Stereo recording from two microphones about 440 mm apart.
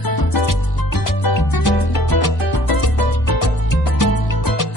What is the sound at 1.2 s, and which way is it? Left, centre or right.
Music, left.